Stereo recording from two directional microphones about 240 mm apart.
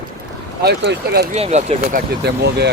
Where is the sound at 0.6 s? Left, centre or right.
Right.